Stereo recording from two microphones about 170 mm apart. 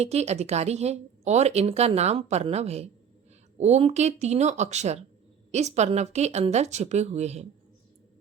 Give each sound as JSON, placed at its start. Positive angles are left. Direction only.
{"t": 0.0, "sound": "speech", "side_deg": -40}